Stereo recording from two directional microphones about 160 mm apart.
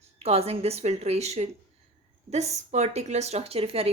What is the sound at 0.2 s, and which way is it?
A woman's voice, 40° right (ahead or behind).